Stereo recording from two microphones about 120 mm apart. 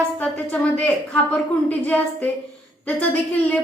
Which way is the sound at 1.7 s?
15° left (ahead or behind).